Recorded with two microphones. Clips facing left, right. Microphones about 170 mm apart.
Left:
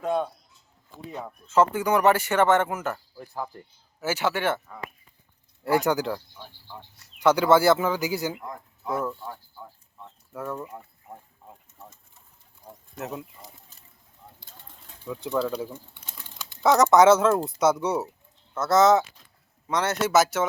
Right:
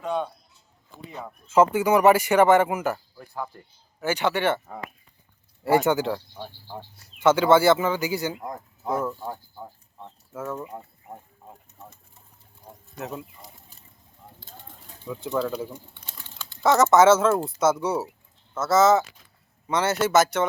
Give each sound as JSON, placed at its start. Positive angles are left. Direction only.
{"t": 0.0, "sound": "speech", "side_deg": 5}
{"t": 1.5, "sound": "speech", "side_deg": -10}
{"t": 4.0, "sound": "speech", "side_deg": 5}
{"t": 5.8, "sound": "speech", "side_deg": 0}
{"t": 6.3, "sound": "cricket", "side_deg": -45}
{"t": 7.2, "sound": "speech", "side_deg": 0}
{"t": 8.4, "sound": "speech", "side_deg": -40}
{"t": 9.1, "sound": "a sound", "side_deg": -30}
{"t": 10.3, "sound": "speech", "side_deg": 0}
{"t": 10.7, "sound": "a sound", "side_deg": -20}
{"t": 13.0, "sound": "speech", "side_deg": 0}
{"t": 15.0, "sound": "speech", "side_deg": 0}
{"t": 16.0, "sound": "typing", "side_deg": 10}
{"t": 16.6, "sound": "speech", "side_deg": 0}